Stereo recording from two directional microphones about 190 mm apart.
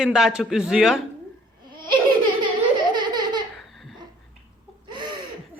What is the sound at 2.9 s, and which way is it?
Baby laughter, 25° right (ahead or behind).